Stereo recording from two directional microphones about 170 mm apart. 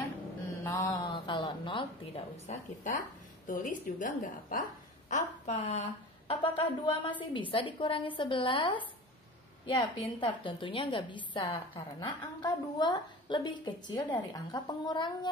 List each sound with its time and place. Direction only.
0.7 s a sound: 15° left (ahead or behind); by 2.9 s 40° left (ahead or behind)
3.4 s a woman's voice: 50° left (ahead or behind)
5.5 s a woman's voice: 40° left (ahead or behind)